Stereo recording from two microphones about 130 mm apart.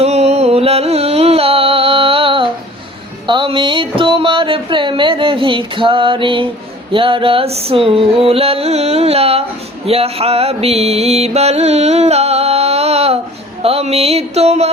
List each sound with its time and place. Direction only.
0.0 s music: 55° right (ahead or behind)
3.2 s a sound: 40° right (ahead or behind)
6.9 s music: 45° right (ahead or behind)